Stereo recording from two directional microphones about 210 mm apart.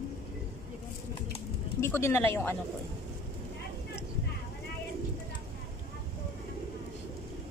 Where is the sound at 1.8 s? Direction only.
10° left (ahead or behind).